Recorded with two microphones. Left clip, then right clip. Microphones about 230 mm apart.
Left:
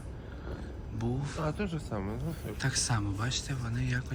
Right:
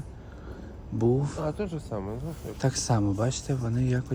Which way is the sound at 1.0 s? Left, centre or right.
Right.